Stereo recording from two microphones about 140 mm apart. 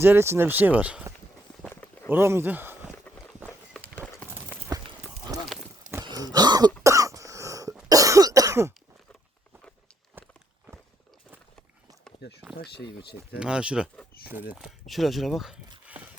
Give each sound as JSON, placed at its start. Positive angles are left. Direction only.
{"t": 0.0, "sound": "speech", "side_deg": -15}
{"t": 1.7, "sound": "walk", "side_deg": 15}
{"t": 2.0, "sound": "speech", "side_deg": -15}
{"t": 6.1, "sound": "throat clearing", "side_deg": -30}
{"t": 6.8, "sound": "cough", "side_deg": -25}
{"t": 10.2, "sound": "walk", "side_deg": -15}
{"t": 13.4, "sound": "speech", "side_deg": -5}